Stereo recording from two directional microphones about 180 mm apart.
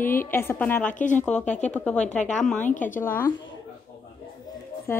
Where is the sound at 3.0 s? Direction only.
10° left (ahead or behind).